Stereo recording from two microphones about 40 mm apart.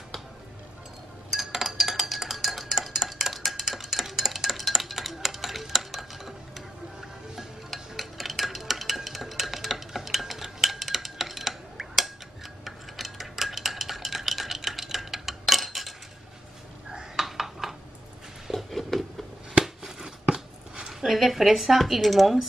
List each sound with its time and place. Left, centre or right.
1.3 s dishes: centre
12.6 s stir: centre
17.2 s a sound: centre
19.6 s a sound: centre
20.3 s chopping: right
20.8 s speech: centre